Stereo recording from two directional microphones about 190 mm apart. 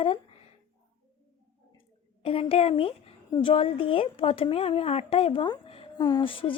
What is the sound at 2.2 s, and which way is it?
A woman's voice, 30° left (ahead or behind).